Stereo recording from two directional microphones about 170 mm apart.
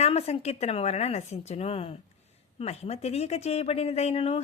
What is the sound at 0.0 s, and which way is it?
A woman's voice, 40° left (ahead or behind).